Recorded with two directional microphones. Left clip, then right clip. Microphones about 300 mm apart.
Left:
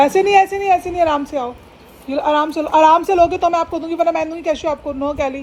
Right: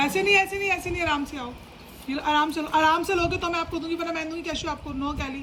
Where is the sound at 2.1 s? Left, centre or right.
Centre.